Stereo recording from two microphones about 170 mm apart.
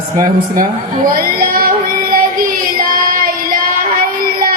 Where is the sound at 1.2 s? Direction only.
60° right (ahead or behind).